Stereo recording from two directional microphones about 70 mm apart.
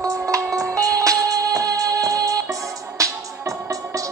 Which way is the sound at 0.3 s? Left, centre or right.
Right.